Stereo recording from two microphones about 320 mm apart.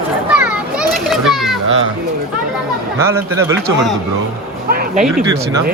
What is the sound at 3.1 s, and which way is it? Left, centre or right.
Speech, centre.